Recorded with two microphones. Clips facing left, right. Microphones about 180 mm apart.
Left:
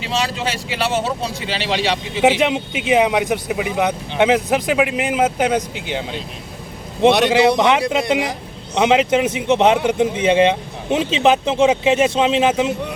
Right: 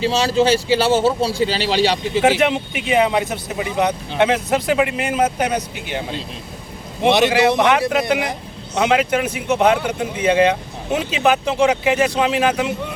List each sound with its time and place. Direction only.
0.0 s speech: 30° right (ahead or behind)
2.2 s speech: 15° left (ahead or behind)
7.3 s speech: 20° left (ahead or behind)